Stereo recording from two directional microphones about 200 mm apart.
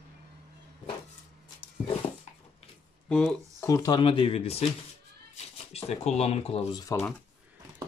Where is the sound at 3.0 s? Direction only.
5° left (ahead or behind).